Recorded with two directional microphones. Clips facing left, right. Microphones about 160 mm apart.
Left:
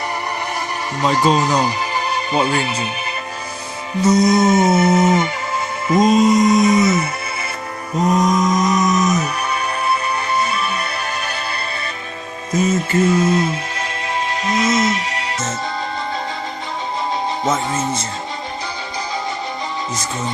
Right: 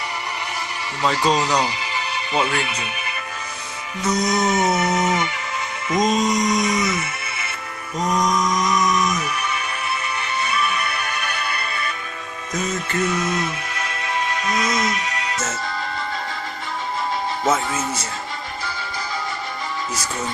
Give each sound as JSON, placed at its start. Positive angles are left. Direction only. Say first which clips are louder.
{"t": 1.0, "sound": "speech", "louder": "left 4 dB", "side_deg": 45}
{"t": 4.0, "sound": "music", "louder": "left 7 dB", "side_deg": 30}
{"t": 6.1, "sound": "mantra", "louder": "left 8 dB", "side_deg": 5}
{"t": 6.3, "sound": "music", "louder": "left 7 dB", "side_deg": 30}